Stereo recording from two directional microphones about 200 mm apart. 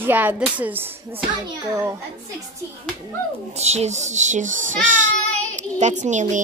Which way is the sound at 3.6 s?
35° right (ahead or behind).